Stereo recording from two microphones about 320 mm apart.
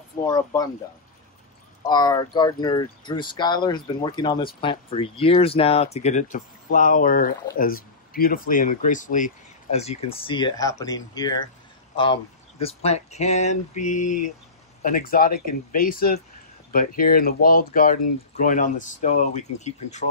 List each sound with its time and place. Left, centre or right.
0.3 s speech: centre
1.8 s speech: centre